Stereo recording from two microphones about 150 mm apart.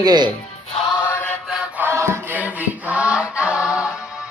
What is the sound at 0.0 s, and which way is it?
Speech, 25° right (ahead or behind).